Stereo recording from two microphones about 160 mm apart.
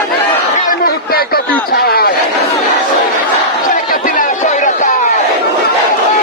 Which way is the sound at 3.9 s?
60° left (ahead or behind).